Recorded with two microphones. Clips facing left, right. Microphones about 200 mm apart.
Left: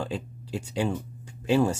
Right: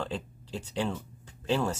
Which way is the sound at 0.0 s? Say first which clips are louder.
Left 3 dB; 10° left (ahead or behind).